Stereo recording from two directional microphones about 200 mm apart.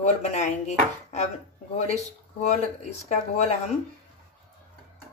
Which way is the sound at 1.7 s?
35° left (ahead or behind).